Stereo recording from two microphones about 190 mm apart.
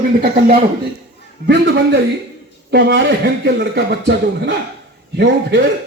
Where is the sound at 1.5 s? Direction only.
65° right (ahead or behind).